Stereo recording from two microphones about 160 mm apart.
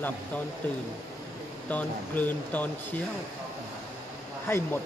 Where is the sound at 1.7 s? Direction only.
10° left (ahead or behind).